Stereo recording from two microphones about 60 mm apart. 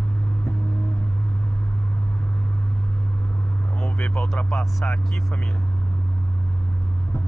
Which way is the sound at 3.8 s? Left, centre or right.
Left.